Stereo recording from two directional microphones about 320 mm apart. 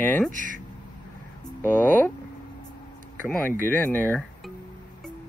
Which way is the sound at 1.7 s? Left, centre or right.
Centre.